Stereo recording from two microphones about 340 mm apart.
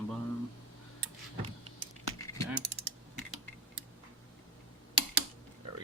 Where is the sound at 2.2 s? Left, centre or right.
Centre.